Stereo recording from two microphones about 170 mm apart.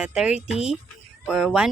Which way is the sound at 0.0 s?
5° right (ahead or behind).